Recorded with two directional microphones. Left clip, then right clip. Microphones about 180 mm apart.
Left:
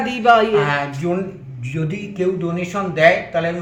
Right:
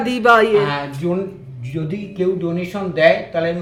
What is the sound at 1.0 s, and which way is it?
A man's voice, 10° right (ahead or behind).